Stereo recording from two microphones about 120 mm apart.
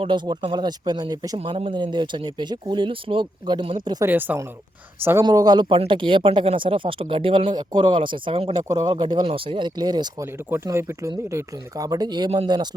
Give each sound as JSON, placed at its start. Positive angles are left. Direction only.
{"t": 0.0, "sound": "speech", "side_deg": -40}
{"t": 1.5, "sound": "speech", "side_deg": -45}
{"t": 4.0, "sound": "speech", "side_deg": -15}
{"t": 5.2, "sound": "speech", "side_deg": -35}
{"t": 8.6, "sound": "speech", "side_deg": -35}
{"t": 10.3, "sound": "speech", "side_deg": -20}